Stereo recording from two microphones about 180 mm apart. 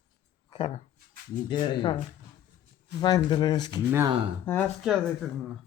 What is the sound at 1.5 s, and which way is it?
Speech, 25° left (ahead or behind).